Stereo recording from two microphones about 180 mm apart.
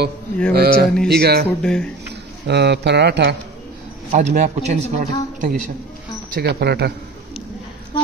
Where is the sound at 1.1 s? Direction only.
65° right (ahead or behind).